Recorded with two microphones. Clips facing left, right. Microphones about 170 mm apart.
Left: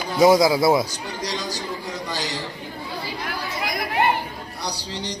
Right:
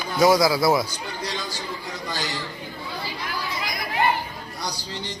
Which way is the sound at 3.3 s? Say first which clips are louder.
Left 3 dB; 60° left (ahead or behind).